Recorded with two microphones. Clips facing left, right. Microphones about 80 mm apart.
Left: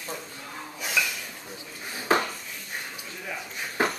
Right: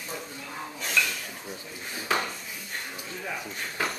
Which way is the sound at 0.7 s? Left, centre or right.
Centre.